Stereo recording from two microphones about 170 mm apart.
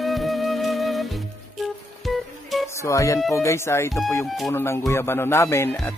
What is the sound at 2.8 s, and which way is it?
A man's voice, 20° left (ahead or behind).